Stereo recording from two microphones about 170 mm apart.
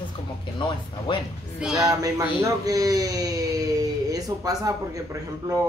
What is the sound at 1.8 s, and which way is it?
Speech, 20° right (ahead or behind).